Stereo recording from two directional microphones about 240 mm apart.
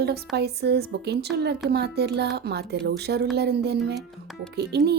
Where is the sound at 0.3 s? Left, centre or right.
Right.